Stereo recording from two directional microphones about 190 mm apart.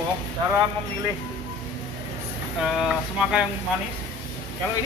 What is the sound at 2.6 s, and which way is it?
Speech, 5° right (ahead or behind).